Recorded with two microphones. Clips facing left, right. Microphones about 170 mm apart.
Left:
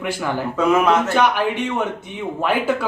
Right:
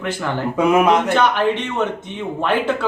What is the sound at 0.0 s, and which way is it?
Speech, 10° left (ahead or behind).